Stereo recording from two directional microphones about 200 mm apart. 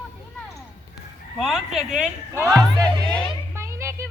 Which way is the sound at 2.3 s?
15° right (ahead or behind).